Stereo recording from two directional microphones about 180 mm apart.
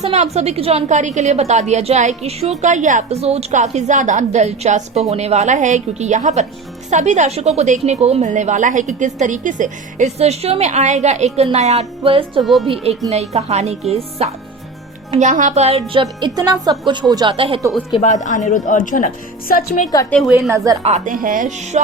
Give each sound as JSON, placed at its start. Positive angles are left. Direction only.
{"t": 0.1, "sound": "a woman's voice", "side_deg": -35}
{"t": 12.4, "sound": "a woman's voice", "side_deg": 0}
{"t": 12.6, "sound": "a woman's voice", "side_deg": -35}
{"t": 15.9, "sound": "speech", "side_deg": -25}
{"t": 17.9, "sound": "a woman's voice", "side_deg": 40}
{"t": 20.1, "sound": "a woman's voice", "side_deg": 0}
{"t": 20.8, "sound": "a woman's voice", "side_deg": -45}